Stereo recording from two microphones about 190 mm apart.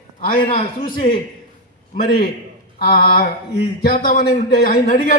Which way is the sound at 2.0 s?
50° left (ahead or behind).